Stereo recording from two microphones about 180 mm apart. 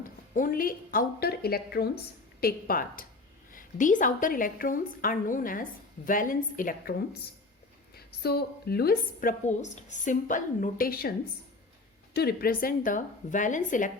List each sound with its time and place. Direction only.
0.3 s a woman's voice: 50° left (ahead or behind)
12.1 s a woman's voice: 60° left (ahead or behind)